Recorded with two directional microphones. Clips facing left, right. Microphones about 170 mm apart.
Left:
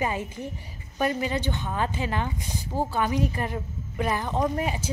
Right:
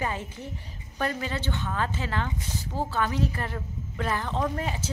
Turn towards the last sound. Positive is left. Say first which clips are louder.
# left 3 dB
turn(degrees=15)  # may be behind; listen again after turning